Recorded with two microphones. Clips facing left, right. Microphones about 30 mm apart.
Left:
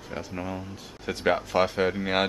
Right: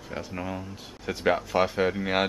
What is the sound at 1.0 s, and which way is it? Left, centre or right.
Speech, centre.